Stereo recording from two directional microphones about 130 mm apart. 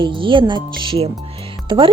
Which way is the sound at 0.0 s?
40° right (ahead or behind).